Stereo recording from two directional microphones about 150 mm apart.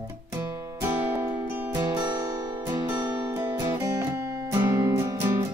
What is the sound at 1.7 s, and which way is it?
Music, 25° right (ahead or behind).